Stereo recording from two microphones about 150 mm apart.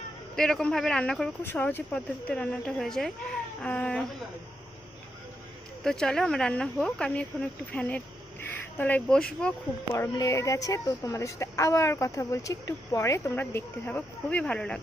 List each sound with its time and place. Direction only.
0.3 s speech: 5° left (ahead or behind)
5.8 s speech: 5° left (ahead or behind)
9.9 s speech: 20° left (ahead or behind)